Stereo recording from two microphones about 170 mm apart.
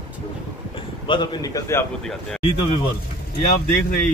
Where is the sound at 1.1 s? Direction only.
25° left (ahead or behind).